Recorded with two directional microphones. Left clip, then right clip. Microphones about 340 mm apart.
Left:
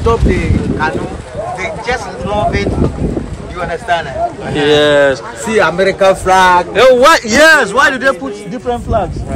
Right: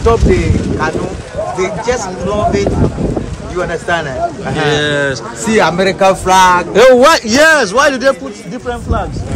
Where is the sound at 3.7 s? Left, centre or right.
Centre.